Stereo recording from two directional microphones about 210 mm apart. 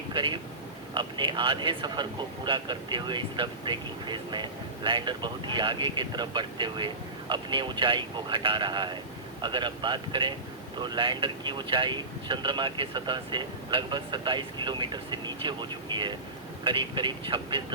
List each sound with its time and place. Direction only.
0.1 s speech: 20° right (ahead or behind)